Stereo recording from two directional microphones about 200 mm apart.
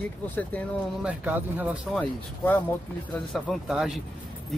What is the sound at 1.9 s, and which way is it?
Speech, 10° left (ahead or behind).